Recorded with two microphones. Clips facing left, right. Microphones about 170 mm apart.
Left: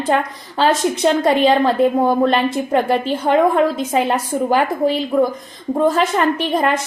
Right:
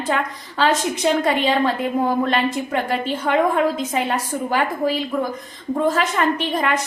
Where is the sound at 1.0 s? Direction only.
40° left (ahead or behind).